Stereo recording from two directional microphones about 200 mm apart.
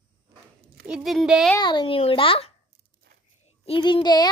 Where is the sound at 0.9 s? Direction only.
Centre (ahead or behind).